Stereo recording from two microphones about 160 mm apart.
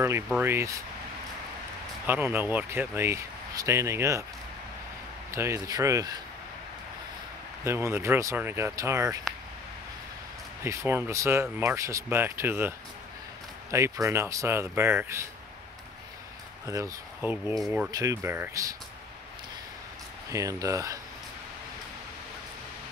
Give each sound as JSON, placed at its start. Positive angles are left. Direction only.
{"t": 0.3, "sound": "speech", "side_deg": -15}
{"t": 2.0, "sound": "speech", "side_deg": -10}
{"t": 5.3, "sound": "speech", "side_deg": -15}
{"t": 7.6, "sound": "speech", "side_deg": -15}
{"t": 10.6, "sound": "speech", "side_deg": -15}
{"t": 16.6, "sound": "speech", "side_deg": -20}
{"t": 17.6, "sound": "speech", "side_deg": 0}
{"t": 17.9, "sound": "speech", "side_deg": -20}
{"t": 20.2, "sound": "speech", "side_deg": -20}